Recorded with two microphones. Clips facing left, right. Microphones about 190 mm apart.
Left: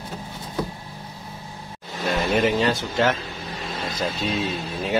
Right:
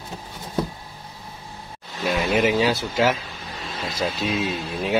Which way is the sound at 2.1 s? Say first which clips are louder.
Right 1 dB; 5° right (ahead or behind).